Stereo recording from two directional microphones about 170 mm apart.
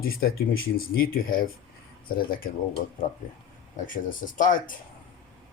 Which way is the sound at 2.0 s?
55° left (ahead or behind).